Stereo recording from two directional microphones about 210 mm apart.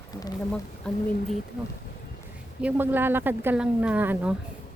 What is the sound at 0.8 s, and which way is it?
Speech, 5° left (ahead or behind).